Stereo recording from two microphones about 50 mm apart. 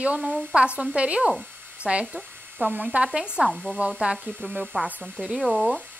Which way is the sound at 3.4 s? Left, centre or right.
Centre.